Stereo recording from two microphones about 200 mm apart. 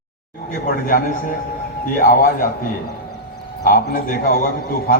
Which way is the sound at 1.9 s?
45° left (ahead or behind).